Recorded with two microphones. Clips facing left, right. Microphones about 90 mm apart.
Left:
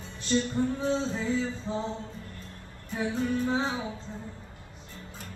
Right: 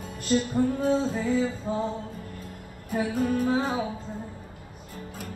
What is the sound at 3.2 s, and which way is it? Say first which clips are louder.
Music: right 3 dB; 45° right (ahead or behind).